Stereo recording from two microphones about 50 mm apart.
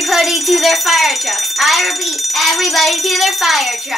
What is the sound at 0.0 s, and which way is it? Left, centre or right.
Speech, centre.